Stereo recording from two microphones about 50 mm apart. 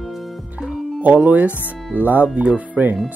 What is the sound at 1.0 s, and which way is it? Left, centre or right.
Speech, right.